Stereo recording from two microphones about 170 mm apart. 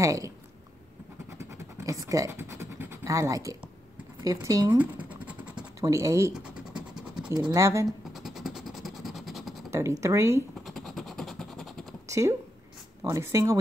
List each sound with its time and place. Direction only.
0.0 s speech: 20° right (ahead or behind)
1.4 s scratch: 15° right (ahead or behind)
4.2 s speech: 20° right (ahead or behind)
4.7 s scratch: 10° right (ahead or behind)
5.8 s speech: 20° right (ahead or behind)
6.3 s scratch: 5° right (ahead or behind)
7.3 s speech: 20° right (ahead or behind)
8.1 s vehicle: centre (ahead or behind)
9.7 s speech: 15° right (ahead or behind)
10.6 s vehicle: centre (ahead or behind)
12.1 s speech: 15° right (ahead or behind)